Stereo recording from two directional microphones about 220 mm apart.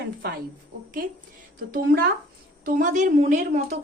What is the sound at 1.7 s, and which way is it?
A woman's voice, 45° right (ahead or behind).